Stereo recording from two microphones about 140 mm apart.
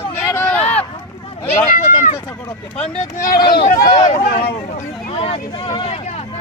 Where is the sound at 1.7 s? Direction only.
65° left (ahead or behind).